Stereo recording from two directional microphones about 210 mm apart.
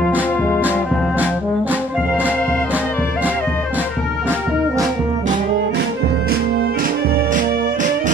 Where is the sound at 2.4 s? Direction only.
5° left (ahead or behind).